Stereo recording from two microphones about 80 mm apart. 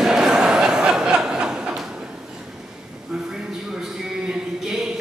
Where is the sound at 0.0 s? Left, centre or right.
Centre.